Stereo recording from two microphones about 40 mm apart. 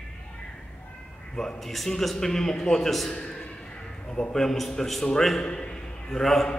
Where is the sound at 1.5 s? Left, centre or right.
Centre.